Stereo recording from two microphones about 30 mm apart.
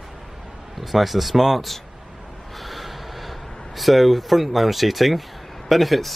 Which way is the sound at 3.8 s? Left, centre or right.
Centre.